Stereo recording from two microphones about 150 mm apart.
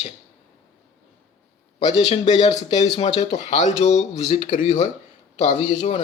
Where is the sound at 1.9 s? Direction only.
40° left (ahead or behind).